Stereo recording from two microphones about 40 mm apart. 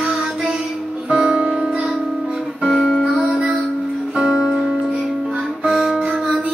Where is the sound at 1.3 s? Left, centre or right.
Right.